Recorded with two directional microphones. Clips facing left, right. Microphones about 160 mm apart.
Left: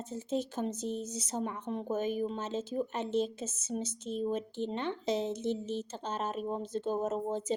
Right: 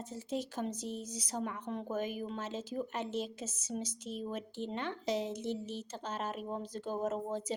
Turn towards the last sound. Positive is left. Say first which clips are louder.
# left 3 dB
turn(degrees=25)  # may be behind; listen again after turning